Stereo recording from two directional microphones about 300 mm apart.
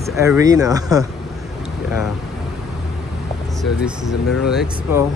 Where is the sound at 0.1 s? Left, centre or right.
Centre.